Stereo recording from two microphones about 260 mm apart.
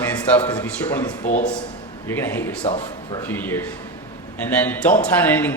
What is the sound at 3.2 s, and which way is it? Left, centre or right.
A man's voice, centre.